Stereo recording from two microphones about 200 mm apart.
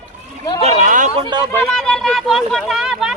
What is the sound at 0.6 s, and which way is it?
Speech, 40° right (ahead or behind).